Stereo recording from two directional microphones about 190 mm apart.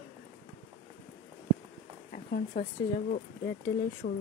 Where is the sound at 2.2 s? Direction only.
50° left (ahead or behind).